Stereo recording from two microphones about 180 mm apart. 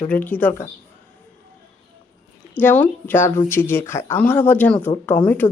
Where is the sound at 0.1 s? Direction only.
10° left (ahead or behind).